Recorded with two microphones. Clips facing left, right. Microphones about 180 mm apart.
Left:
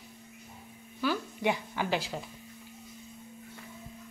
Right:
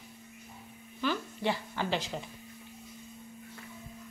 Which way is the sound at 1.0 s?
10° left (ahead or behind).